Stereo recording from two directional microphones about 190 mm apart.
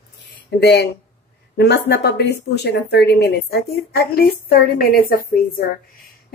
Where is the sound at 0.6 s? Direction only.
60° left (ahead or behind).